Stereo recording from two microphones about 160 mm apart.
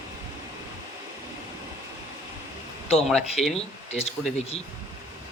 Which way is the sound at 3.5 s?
40° left (ahead or behind).